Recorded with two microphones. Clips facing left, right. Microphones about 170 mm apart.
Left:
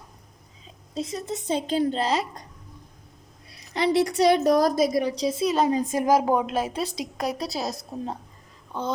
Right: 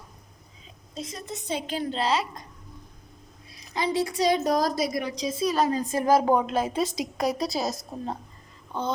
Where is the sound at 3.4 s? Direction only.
70° left (ahead or behind); by 4.9 s 55° left (ahead or behind).